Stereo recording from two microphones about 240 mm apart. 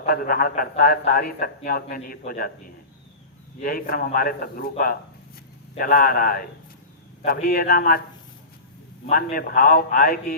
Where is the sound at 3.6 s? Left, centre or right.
Left.